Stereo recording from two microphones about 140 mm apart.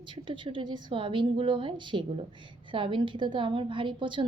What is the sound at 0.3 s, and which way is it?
A woman's voice, 35° right (ahead or behind).